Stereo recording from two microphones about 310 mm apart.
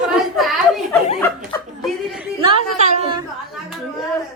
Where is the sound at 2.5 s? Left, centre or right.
Right.